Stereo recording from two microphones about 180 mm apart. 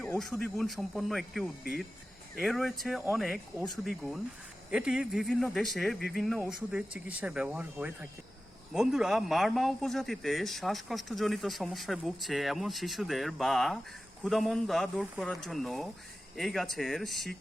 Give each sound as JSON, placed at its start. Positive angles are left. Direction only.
{"t": 0.2, "sound": "speech", "side_deg": 0}